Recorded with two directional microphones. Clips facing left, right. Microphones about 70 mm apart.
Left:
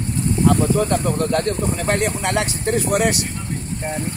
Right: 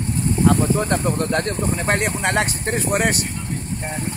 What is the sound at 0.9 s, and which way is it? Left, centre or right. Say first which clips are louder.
Speech: left 1 dB; right.